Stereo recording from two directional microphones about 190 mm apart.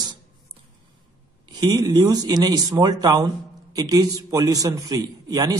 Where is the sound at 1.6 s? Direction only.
20° right (ahead or behind).